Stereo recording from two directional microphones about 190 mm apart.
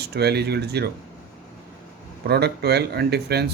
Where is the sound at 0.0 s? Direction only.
60° right (ahead or behind).